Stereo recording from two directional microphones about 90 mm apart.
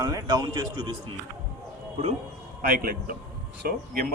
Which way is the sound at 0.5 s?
60° right (ahead or behind).